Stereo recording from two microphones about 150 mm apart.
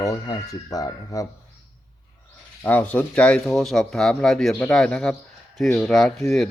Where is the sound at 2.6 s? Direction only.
10° left (ahead or behind).